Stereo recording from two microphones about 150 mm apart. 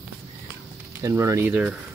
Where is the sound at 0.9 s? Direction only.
20° right (ahead or behind).